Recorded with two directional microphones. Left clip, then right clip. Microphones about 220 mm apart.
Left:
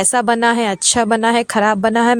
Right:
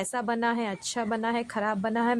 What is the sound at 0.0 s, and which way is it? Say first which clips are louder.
A woman's voice: left 14 dB; 35° left (ahead or behind).